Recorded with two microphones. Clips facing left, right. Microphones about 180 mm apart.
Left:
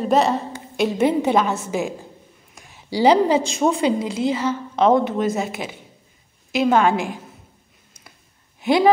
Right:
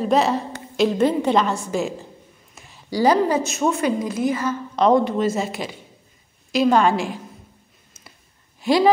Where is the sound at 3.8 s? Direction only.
25° left (ahead or behind).